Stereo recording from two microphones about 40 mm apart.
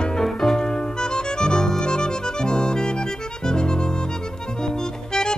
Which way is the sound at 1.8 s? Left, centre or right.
Centre.